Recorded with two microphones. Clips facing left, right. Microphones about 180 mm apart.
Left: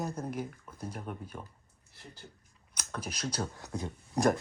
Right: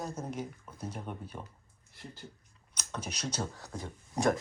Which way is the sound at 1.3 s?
5° right (ahead or behind).